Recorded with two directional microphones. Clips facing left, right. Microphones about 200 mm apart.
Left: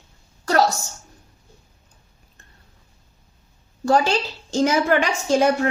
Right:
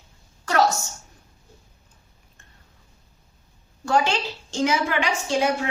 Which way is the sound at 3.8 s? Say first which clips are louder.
Left 3 dB; 35° left (ahead or behind).